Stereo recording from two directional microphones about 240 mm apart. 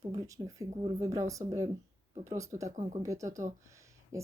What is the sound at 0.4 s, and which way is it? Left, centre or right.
Speech, centre.